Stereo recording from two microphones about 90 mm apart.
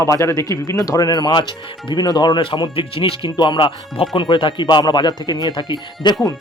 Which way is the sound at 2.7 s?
90° left.